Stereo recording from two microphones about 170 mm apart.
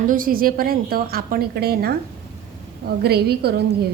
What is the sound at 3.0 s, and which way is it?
Speech, 70° right (ahead or behind).